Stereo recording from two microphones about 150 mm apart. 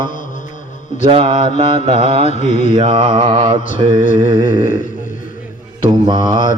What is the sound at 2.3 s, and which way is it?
Mantra, 50° left (ahead or behind).